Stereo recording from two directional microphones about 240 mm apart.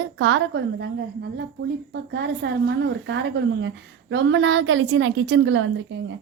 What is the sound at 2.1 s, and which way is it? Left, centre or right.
A woman's voice, right.